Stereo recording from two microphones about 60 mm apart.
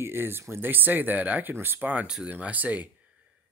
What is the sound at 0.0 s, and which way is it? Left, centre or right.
Speech, right.